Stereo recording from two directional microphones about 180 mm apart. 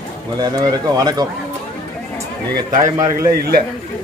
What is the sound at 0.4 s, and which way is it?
Speech, 20° right (ahead or behind).